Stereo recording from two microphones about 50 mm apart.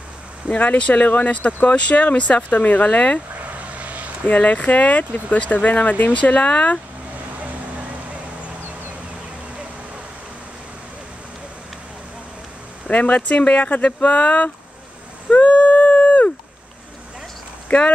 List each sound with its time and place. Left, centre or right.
0.5 s speech: left
3.3 s vehicle: right
4.3 s speech: left
12.8 s speech: left
15.2 s a sound: left
17.7 s speech: left